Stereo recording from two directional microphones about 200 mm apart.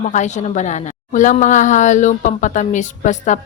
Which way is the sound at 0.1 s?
35° left (ahead or behind).